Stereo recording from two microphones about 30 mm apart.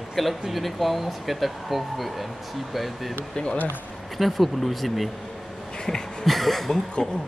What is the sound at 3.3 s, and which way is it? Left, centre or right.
Speech, left.